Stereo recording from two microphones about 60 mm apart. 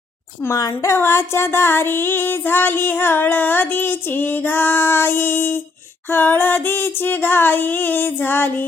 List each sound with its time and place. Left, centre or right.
0.5 s a woman's voice: left
0.9 s music: left